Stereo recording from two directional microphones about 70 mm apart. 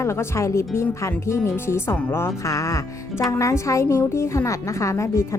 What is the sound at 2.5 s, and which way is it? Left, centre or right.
Speech, left.